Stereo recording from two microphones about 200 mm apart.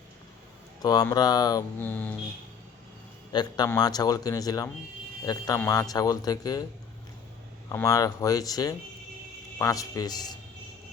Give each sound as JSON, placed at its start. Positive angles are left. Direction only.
{"t": 0.8, "sound": "speech", "side_deg": 20}
{"t": 3.3, "sound": "speech", "side_deg": 20}
{"t": 7.7, "sound": "speech", "side_deg": 15}